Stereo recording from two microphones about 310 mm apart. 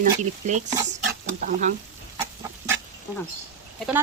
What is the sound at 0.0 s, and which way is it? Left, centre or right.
Speech, right.